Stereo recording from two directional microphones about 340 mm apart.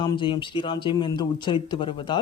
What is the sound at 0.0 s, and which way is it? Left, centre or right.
Speech, centre.